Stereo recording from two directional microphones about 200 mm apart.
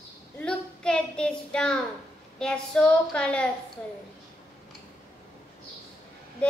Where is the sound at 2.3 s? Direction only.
5° left (ahead or behind).